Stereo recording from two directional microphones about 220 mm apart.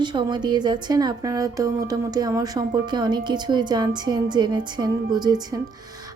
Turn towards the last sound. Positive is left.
turn(degrees=-20)  # may be behind; listen again after turning